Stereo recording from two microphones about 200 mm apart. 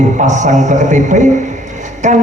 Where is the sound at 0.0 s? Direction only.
35° right (ahead or behind).